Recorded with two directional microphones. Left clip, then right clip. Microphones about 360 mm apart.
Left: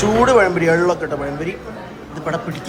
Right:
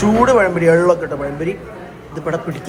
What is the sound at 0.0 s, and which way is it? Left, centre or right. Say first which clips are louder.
Speech: even; centre.